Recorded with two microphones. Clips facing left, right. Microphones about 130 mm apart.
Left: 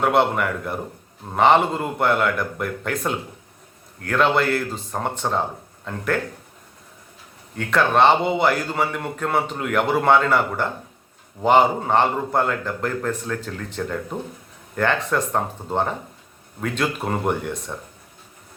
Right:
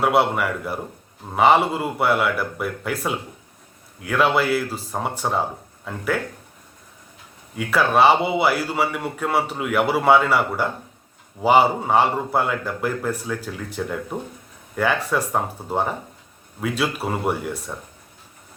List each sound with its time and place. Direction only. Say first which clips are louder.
0.0 s speech: even; 5° right (ahead or behind)
7.5 s a man's voice: even; 5° right (ahead or behind)